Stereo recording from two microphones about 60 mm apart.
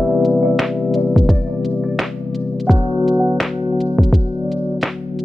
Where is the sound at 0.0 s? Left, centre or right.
Centre.